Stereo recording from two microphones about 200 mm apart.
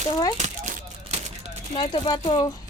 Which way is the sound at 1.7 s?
25° left (ahead or behind).